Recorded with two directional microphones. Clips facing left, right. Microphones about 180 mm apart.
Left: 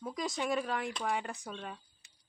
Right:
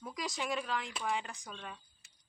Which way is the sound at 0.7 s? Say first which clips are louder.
Left 3 dB; 55° left (ahead or behind).